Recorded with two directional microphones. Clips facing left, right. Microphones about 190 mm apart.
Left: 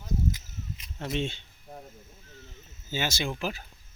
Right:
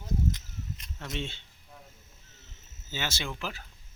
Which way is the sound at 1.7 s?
45° left (ahead or behind).